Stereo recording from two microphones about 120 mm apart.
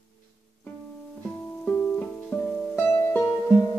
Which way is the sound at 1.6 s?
15° left (ahead or behind).